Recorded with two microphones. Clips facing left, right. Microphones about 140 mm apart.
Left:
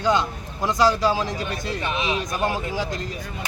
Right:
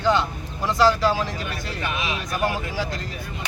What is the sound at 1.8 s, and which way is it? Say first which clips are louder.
Speech: left 2 dB; 30° left (ahead or behind).